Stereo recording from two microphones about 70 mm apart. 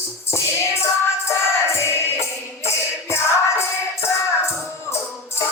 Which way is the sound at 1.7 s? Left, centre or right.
Left.